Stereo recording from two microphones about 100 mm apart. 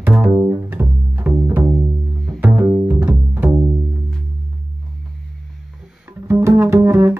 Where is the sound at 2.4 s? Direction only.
15° right (ahead or behind).